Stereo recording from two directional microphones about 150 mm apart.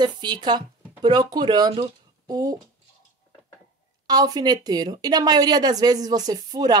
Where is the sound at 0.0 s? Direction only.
30° right (ahead or behind).